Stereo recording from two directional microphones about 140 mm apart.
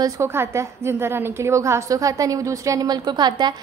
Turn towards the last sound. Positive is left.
turn(degrees=-30)  # may be behind; listen again after turning